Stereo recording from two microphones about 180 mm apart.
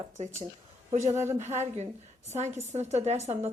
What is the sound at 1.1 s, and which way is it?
Speech, 15° right (ahead or behind).